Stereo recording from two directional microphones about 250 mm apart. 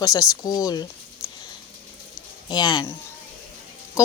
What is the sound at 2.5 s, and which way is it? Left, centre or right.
Speech, centre.